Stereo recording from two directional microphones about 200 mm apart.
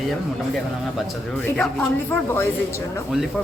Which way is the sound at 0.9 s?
5° left (ahead or behind).